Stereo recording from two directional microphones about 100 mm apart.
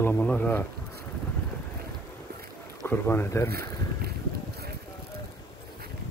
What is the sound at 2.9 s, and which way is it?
Speech, 20° left (ahead or behind).